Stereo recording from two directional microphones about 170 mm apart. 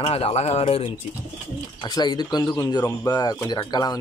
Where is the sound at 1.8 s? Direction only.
25° left (ahead or behind).